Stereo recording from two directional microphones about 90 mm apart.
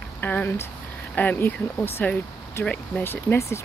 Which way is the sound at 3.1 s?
30° left (ahead or behind).